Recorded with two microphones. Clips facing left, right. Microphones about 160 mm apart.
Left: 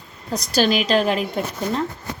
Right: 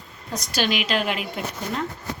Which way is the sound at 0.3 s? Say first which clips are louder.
Left 6 dB; 35° left (ahead or behind).